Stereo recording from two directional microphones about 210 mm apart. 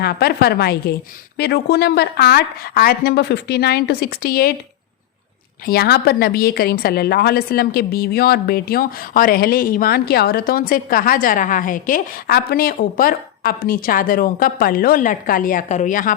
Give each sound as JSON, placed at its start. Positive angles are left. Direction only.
{"t": 0.0, "sound": "a woman's voice", "side_deg": 50}
{"t": 5.6, "sound": "a woman's voice", "side_deg": 50}